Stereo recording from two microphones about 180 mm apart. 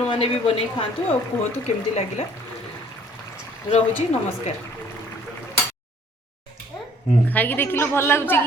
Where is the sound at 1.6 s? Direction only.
35° left (ahead or behind).